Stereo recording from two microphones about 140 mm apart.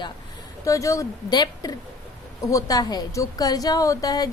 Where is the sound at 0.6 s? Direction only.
20° left (ahead or behind).